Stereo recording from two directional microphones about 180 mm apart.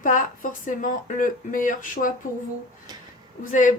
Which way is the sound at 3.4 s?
45° left (ahead or behind).